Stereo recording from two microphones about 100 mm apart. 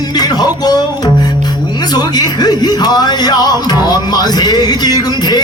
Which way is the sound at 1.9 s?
45° left (ahead or behind).